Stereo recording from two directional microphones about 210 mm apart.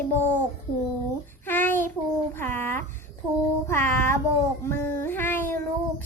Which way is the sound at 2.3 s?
10° left (ahead or behind).